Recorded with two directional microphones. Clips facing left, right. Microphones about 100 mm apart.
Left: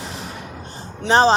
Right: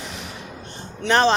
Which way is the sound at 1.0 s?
30° left (ahead or behind).